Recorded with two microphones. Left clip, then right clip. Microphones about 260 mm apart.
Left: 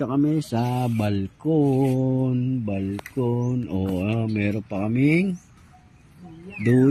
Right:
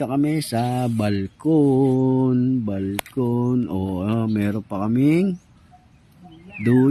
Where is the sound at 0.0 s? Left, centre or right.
Centre.